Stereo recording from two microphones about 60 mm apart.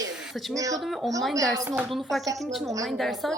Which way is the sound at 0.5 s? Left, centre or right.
Right.